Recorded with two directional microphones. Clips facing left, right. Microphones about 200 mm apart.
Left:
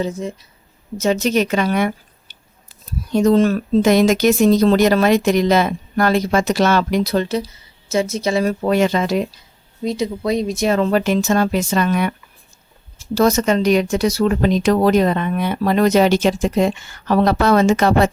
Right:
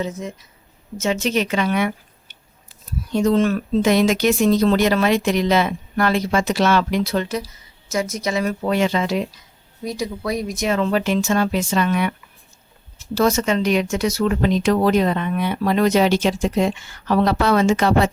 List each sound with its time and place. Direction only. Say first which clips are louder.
0.0 s speech: left 4 dB; 30° left (ahead or behind)
9.8 s speech: left 5 dB; 25° left (ahead or behind); by 12.1 s 45° left (ahead or behind)
13.1 s speech: left 3 dB; 40° left (ahead or behind)